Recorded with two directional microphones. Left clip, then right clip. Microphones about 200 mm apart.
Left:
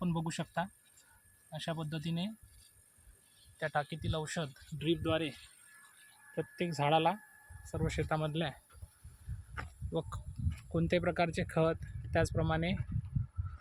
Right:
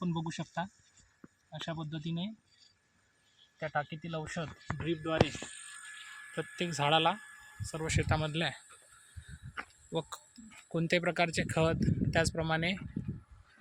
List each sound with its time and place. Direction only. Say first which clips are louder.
0.0 s a sound: even; 15° left (ahead or behind)
1.6 s speech: left 1 dB; 15° left (ahead or behind)
3.6 s speech: even; 15° left (ahead or behind)
6.3 s speech: right 1 dB; centre (ahead or behind)
9.9 s speech: right 1 dB; 5° right (ahead or behind)